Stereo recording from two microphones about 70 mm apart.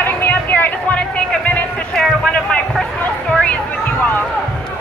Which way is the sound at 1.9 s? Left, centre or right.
Centre.